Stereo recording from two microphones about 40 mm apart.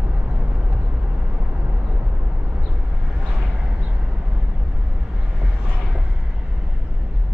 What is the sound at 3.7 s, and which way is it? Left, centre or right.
Vehicle, right.